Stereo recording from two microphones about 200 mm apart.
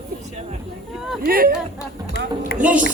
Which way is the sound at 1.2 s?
45° right (ahead or behind).